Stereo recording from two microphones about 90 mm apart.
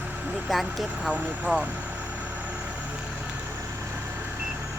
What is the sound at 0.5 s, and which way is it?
Speech, centre (ahead or behind).